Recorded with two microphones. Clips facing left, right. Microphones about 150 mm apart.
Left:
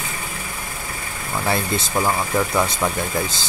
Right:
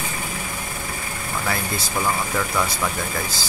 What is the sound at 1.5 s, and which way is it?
Speech, 25° left (ahead or behind).